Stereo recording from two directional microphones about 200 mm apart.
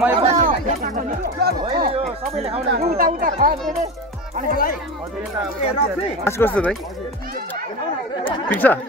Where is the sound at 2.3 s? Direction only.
30° right (ahead or behind).